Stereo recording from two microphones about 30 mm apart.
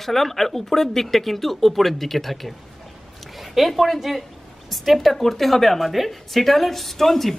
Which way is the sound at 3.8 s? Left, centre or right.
Centre.